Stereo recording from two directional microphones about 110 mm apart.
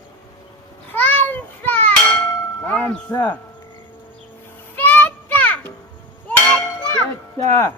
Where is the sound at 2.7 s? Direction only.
10° left (ahead or behind).